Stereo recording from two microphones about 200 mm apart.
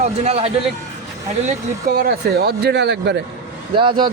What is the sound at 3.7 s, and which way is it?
Speech, 25° right (ahead or behind).